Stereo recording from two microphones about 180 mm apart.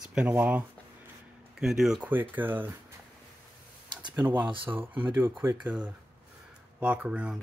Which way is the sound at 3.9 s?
25° right (ahead or behind).